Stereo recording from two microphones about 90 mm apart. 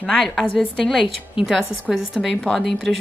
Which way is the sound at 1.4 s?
5° right (ahead or behind).